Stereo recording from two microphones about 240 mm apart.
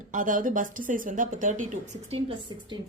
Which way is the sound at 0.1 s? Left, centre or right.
Right.